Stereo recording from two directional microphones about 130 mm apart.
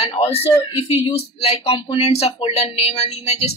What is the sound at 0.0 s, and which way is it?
Speech, 50° left (ahead or behind).